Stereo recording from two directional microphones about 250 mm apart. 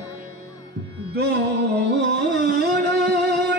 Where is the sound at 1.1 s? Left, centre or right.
Right.